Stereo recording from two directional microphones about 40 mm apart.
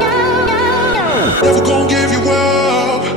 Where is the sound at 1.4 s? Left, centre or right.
Centre.